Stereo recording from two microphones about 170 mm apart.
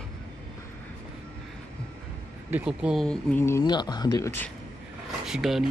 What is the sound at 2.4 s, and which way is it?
Speech, 10° right (ahead or behind).